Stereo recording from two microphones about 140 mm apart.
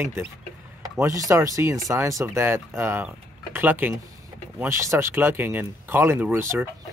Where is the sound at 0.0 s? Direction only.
20° right (ahead or behind).